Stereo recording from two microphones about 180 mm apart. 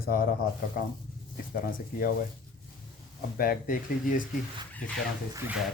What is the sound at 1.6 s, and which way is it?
Speech, 50° left (ahead or behind).